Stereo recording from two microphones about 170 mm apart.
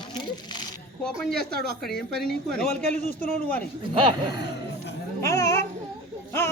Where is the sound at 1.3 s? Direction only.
65° right (ahead or behind).